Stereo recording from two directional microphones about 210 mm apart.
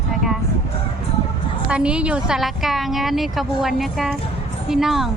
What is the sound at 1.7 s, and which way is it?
Speech, 5° right (ahead or behind).